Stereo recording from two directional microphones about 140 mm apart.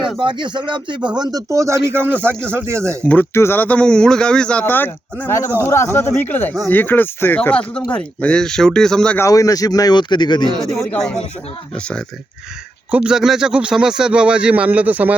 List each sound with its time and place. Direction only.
0.2 s speech: 35° right (ahead or behind); by 2.8 s 15° right (ahead or behind)
3.0 s speech: 10° left (ahead or behind)
9.1 s a man's voice: 25° left (ahead or behind)
10.6 s speech: centre (ahead or behind)
12.9 s speech: 5° right (ahead or behind)